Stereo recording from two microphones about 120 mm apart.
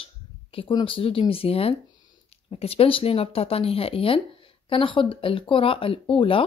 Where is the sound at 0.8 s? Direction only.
50° left (ahead or behind).